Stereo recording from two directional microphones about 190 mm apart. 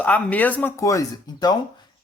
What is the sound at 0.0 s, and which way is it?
A woman's voice, 5° left (ahead or behind).